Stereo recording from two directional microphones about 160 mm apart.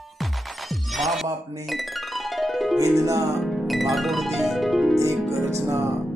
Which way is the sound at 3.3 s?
Centre (ahead or behind).